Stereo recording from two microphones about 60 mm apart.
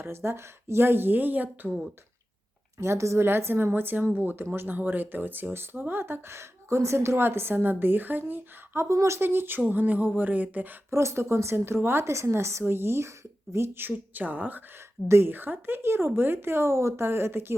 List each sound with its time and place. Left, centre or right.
0.0 s speech: right
2.7 s a woman's voice: right
3.2 s speech: right
8.7 s a woman's voice: right
9.6 s a sound: right
10.9 s a woman's voice: right
15.0 s a woman's voice: right